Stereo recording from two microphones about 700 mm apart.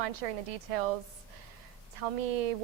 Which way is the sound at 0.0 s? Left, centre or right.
Right.